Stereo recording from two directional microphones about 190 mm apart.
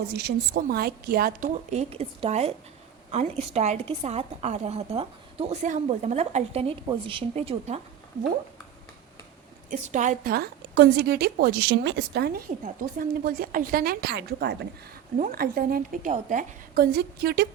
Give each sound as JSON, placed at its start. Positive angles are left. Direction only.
{"t": 0.1, "sound": "a woman's voice", "side_deg": -60}
{"t": 9.6, "sound": "a woman's voice", "side_deg": -40}
{"t": 12.6, "sound": "a woman's voice", "side_deg": -50}